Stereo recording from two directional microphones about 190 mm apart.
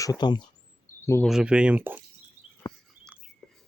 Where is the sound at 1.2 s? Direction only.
5° right (ahead or behind).